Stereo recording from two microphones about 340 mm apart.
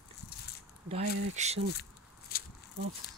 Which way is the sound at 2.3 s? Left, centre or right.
Left.